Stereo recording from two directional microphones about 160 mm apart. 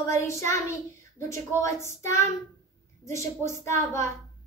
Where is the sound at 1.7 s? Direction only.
15° left (ahead or behind).